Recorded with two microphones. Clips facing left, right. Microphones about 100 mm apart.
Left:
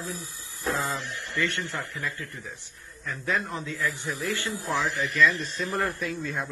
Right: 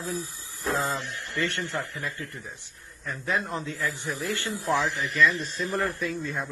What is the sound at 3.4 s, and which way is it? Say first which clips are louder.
Speech: even; 30° right (ahead or behind).